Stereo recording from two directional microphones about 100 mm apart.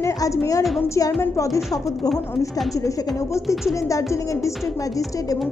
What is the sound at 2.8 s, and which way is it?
Speech, 30° left (ahead or behind).